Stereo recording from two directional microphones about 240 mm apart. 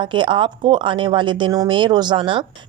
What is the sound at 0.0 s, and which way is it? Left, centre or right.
Speech, centre.